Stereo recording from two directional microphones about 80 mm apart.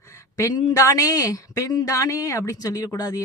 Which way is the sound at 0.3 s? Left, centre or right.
Left.